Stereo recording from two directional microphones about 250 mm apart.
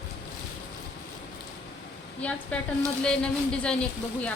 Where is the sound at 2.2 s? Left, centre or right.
Centre.